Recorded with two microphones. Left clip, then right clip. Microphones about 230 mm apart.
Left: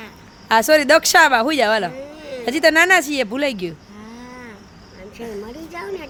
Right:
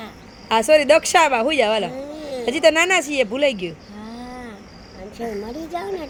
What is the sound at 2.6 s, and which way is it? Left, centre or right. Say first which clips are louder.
Speech: left 3 dB; left.